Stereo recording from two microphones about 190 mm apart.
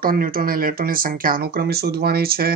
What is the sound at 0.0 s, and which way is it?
Speech, 50° right (ahead or behind).